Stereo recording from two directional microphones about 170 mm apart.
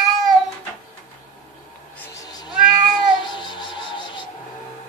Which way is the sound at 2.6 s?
Centre (ahead or behind).